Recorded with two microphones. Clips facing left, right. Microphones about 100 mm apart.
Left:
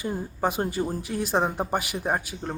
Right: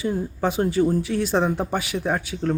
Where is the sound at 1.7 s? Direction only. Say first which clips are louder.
Right 2 dB; 50° left (ahead or behind).